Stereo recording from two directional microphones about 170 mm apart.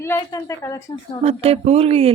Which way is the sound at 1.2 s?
35° right (ahead or behind).